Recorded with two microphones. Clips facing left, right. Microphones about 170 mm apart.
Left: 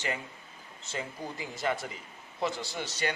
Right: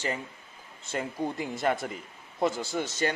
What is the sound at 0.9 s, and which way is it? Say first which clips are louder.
Speech: right 6 dB; 55° right (ahead or behind).